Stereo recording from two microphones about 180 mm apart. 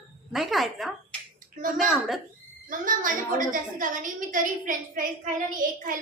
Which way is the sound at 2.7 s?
50° right (ahead or behind).